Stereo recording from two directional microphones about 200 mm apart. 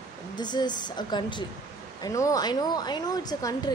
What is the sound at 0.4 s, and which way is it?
Speech, 20° left (ahead or behind).